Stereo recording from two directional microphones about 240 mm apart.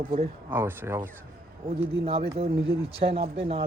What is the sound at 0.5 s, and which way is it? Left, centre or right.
Speech, centre.